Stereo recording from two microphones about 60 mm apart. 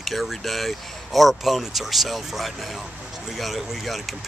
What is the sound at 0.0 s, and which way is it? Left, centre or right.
Speech, centre.